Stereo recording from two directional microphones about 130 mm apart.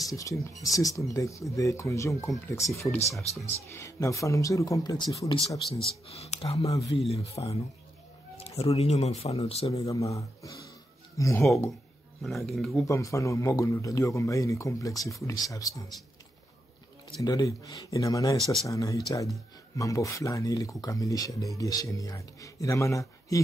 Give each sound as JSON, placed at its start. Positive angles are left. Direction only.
{"t": 0.1, "sound": "speech", "side_deg": 25}
{"t": 6.0, "sound": "speech", "side_deg": 55}
{"t": 6.6, "sound": "speech", "side_deg": 25}
{"t": 7.0, "sound": "speech", "side_deg": 55}
{"t": 9.9, "sound": "speech", "side_deg": 25}
{"t": 12.4, "sound": "speech", "side_deg": 0}
{"t": 12.8, "sound": "speech", "side_deg": 25}
{"t": 17.2, "sound": "speech", "side_deg": 25}
{"t": 18.4, "sound": "speech", "side_deg": 0}
{"t": 18.7, "sound": "speech", "side_deg": 25}